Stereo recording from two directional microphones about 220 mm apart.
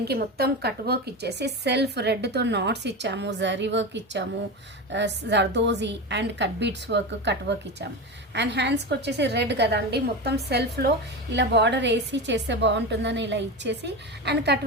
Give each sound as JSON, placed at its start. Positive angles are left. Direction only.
{"t": 0.0, "sound": "a woman's voice", "side_deg": -45}